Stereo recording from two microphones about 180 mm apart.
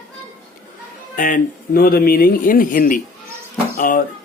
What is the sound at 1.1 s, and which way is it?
Speech, 50° left (ahead or behind).